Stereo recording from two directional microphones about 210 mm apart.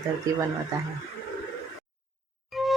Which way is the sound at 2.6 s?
Centre (ahead or behind).